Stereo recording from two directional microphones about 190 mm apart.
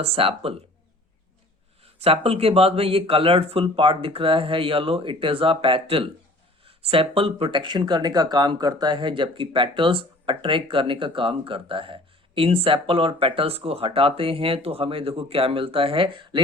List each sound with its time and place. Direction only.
0.0 s speech: 30° right (ahead or behind)
1.8 s speech: 30° right (ahead or behind)